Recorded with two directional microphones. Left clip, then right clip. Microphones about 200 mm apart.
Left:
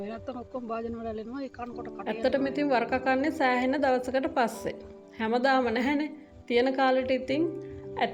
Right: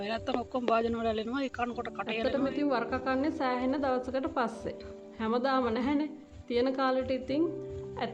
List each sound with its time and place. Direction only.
0.0 s a woman's voice: 5° left (ahead or behind)